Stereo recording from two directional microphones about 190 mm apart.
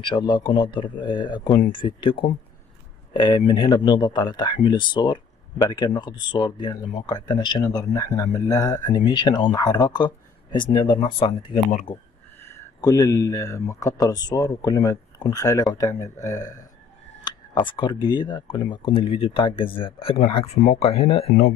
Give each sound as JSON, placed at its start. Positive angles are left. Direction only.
{"t": 0.0, "sound": "speech", "side_deg": 25}
{"t": 12.4, "sound": "speech", "side_deg": 15}
{"t": 17.6, "sound": "speech", "side_deg": 25}